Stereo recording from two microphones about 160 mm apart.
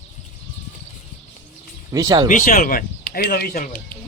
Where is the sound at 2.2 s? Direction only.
55° left (ahead or behind).